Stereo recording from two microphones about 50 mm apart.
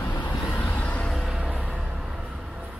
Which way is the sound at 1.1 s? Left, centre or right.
Centre.